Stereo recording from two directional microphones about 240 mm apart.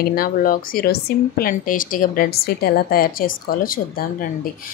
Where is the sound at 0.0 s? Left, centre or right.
Left.